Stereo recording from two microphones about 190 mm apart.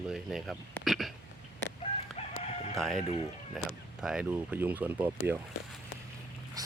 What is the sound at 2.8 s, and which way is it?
Speech, centre (ahead or behind).